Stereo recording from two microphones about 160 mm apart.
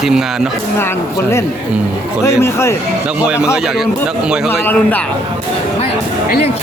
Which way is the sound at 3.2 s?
5° right (ahead or behind).